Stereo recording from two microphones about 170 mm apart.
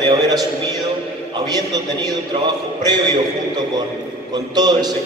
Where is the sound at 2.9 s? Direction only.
25° right (ahead or behind).